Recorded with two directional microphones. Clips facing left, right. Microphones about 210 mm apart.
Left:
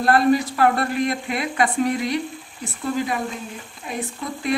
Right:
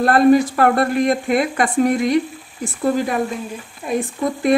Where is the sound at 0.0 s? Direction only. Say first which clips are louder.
Right 5 dB; 55° right (ahead or behind).